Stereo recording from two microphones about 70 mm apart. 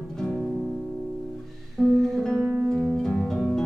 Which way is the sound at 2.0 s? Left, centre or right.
Centre.